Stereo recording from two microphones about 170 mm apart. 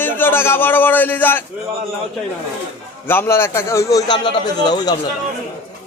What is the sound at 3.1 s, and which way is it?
A man's voice, 15° left (ahead or behind).